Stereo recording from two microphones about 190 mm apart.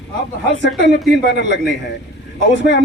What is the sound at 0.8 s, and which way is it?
Speech, 65° left (ahead or behind).